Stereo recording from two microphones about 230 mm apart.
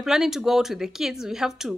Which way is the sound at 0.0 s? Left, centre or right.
Centre.